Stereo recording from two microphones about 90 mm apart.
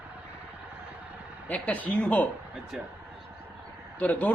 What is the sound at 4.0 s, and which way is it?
Speech, 15° left (ahead or behind).